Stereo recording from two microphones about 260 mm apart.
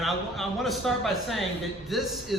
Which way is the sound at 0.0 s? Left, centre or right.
Centre.